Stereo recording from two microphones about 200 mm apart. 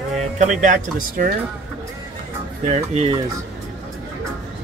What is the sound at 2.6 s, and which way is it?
Speech, 35° right (ahead or behind).